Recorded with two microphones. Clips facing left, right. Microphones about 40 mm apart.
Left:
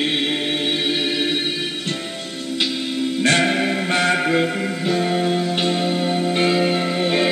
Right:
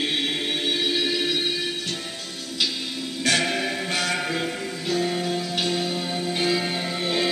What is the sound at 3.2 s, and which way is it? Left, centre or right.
Music, left.